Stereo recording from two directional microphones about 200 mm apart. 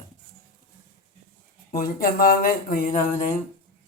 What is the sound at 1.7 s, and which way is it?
Speech, 45° left (ahead or behind).